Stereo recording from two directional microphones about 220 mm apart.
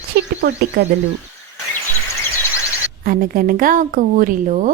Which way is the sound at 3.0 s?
40° right (ahead or behind).